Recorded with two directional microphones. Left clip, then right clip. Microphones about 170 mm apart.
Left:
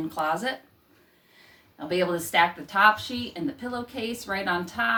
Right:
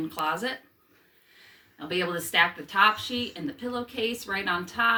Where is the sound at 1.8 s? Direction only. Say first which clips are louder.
Left 3 dB; 25° left (ahead or behind).